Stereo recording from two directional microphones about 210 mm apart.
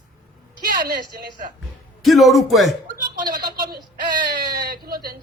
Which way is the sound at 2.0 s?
Centre (ahead or behind).